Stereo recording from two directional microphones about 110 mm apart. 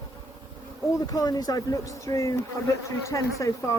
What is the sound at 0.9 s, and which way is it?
A woman's voice, 35° left (ahead or behind).